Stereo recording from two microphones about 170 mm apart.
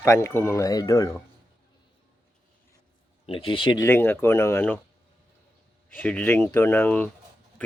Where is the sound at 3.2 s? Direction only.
30° left (ahead or behind).